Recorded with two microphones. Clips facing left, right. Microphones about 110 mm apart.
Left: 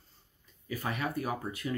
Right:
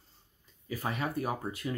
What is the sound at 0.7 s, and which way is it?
Speech, 25° right (ahead or behind).